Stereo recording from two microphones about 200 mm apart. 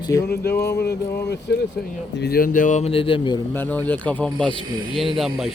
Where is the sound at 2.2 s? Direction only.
50° left (ahead or behind); by 3.4 s 25° left (ahead or behind).